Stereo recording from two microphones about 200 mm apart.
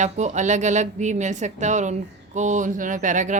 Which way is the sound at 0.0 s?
35° right (ahead or behind).